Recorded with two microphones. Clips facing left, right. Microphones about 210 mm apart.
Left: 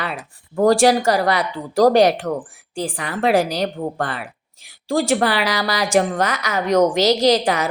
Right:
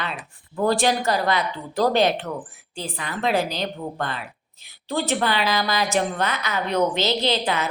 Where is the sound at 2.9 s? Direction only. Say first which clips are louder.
Left 5 dB; 85° left.